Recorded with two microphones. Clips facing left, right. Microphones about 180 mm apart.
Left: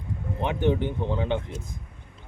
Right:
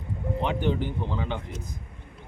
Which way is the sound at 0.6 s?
20° left (ahead or behind).